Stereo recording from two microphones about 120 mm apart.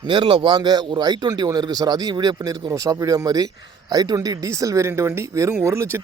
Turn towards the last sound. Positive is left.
turn(degrees=-20)  # may be behind; listen again after turning